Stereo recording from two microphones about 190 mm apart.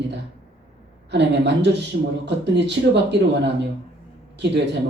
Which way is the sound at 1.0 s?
65° right (ahead or behind).